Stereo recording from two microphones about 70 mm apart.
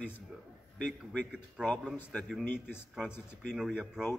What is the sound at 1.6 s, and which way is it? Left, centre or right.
Speech, centre.